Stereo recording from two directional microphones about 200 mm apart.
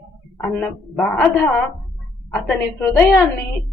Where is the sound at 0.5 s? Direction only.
5° left (ahead or behind).